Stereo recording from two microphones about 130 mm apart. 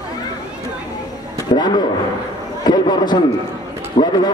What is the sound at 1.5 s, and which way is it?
A man's voice, 35° left (ahead or behind).